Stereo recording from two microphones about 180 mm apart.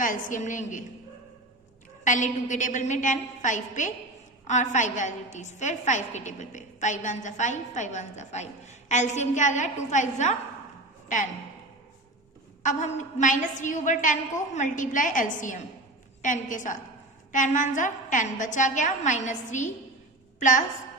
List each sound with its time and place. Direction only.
0.0 s a woman's voice: 45° left (ahead or behind)
2.0 s a woman's voice: 45° left (ahead or behind)
12.6 s a woman's voice: 45° left (ahead or behind)